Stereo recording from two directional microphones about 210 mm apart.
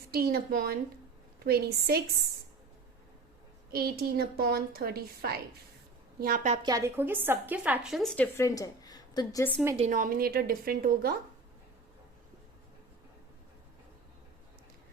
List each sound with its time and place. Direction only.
0.1 s a woman's voice: 45° right (ahead or behind)
3.7 s a woman's voice: 45° right (ahead or behind)
6.6 s a woman's voice: 15° right (ahead or behind); by 9.5 s 15° left (ahead or behind)
9.7 s a woman's voice: 35° right (ahead or behind)